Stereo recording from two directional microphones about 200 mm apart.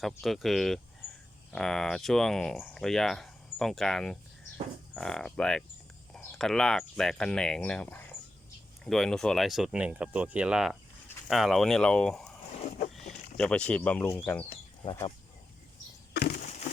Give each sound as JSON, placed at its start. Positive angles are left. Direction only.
{"t": 0.0, "sound": "speech", "side_deg": 0}
{"t": 12.5, "sound": "vehicle", "side_deg": 35}
{"t": 13.3, "sound": "speech", "side_deg": 5}
{"t": 16.1, "sound": "a sound", "side_deg": 50}